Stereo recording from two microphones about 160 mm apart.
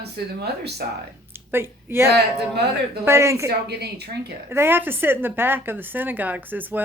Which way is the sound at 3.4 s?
90° right.